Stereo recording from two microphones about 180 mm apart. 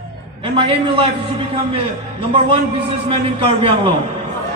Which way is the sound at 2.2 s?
30° right (ahead or behind).